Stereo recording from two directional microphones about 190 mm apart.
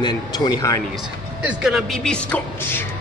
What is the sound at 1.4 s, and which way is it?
Speech, 5° right (ahead or behind).